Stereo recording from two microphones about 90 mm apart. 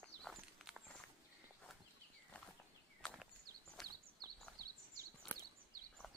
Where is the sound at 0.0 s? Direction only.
10° left (ahead or behind).